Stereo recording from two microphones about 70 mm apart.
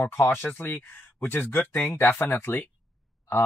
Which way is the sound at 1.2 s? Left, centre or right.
Left.